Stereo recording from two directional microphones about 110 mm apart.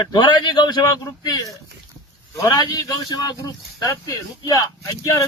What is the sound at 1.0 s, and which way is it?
Speech, 30° left (ahead or behind).